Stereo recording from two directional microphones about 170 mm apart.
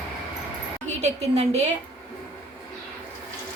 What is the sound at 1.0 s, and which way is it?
Speech, 40° right (ahead or behind).